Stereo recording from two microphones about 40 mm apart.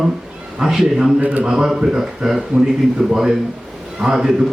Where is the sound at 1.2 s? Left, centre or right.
Right.